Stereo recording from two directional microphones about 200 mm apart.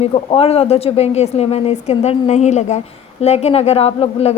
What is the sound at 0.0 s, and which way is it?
A woman's voice, 30° left (ahead or behind).